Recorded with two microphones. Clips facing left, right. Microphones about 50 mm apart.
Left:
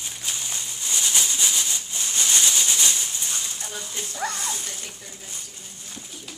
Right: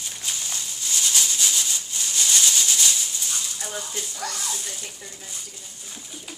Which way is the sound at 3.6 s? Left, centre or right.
Right.